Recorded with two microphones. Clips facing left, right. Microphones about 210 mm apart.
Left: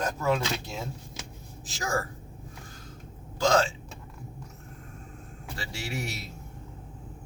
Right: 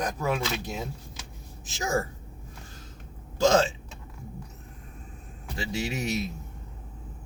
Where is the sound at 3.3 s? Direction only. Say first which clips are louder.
Right 3 dB; 25° right (ahead or behind).